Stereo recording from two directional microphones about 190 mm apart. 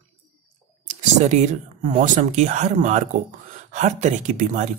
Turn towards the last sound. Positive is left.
turn(degrees=-40)  # may be behind; listen again after turning